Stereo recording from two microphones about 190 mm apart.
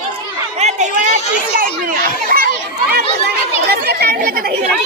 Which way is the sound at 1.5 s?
50° right (ahead or behind).